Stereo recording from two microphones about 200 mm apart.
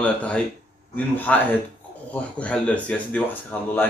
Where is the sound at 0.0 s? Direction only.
5° left (ahead or behind).